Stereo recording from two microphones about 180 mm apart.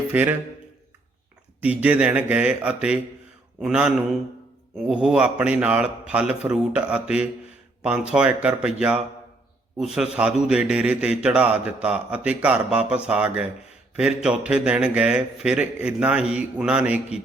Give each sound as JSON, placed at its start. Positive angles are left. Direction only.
{"t": 0.1, "sound": "speech", "side_deg": -10}
{"t": 1.6, "sound": "speech", "side_deg": -10}